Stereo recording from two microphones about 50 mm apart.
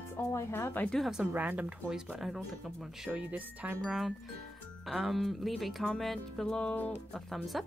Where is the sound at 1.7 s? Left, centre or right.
Centre.